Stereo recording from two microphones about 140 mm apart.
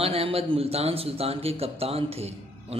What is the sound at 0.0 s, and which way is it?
A man's voice, 45° right (ahead or behind).